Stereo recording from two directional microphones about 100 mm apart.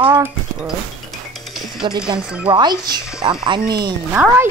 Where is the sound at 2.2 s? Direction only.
10° right (ahead or behind).